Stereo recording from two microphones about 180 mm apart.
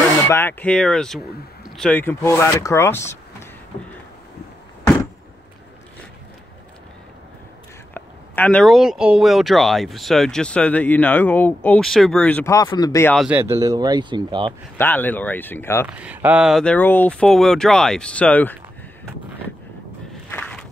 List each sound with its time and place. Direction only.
0.3 s speech: 10° left (ahead or behind)
7.9 s speech: 10° left (ahead or behind)
12.5 s speech: 20° left (ahead or behind)
13.1 s speech: centre (ahead or behind)
13.4 s speech: 15° right (ahead or behind)
14.8 s speech: 10° left (ahead or behind)
15.9 s speech: 10° right (ahead or behind); by 18.6 s 10° left (ahead or behind)
20.2 s walk: 10° left (ahead or behind)